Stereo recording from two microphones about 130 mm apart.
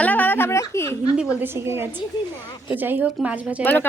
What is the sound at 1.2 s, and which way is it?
Speech, 10° right (ahead or behind).